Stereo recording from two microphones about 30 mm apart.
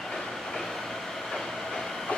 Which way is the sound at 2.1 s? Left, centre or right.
Left.